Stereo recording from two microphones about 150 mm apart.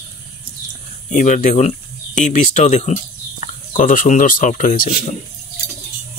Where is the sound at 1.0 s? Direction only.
55° left (ahead or behind).